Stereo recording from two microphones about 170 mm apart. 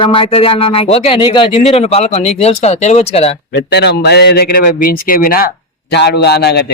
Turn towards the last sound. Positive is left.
turn(degrees=70)  # may be behind; listen again after turning